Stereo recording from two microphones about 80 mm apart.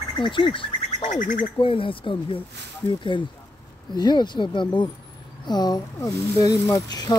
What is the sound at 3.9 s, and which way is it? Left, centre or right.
Speech, left.